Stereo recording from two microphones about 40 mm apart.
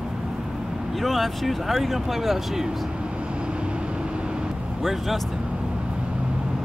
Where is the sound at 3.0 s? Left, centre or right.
Right.